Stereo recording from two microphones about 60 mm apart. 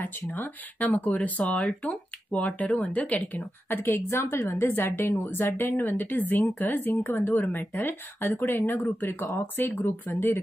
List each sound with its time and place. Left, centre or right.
0.0 s speech: left
3.6 s speech: left
7.3 s speech: left